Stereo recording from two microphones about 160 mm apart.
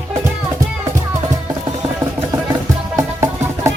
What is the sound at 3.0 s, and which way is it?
Music, 20° right (ahead or behind).